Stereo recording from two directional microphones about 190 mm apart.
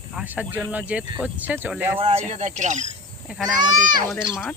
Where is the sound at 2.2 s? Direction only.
35° right (ahead or behind).